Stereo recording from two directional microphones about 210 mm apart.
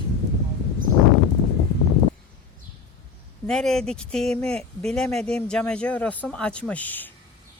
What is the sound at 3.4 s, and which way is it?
Speech, centre (ahead or behind).